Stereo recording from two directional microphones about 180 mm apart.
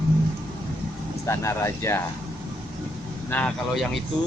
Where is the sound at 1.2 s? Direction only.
15° left (ahead or behind).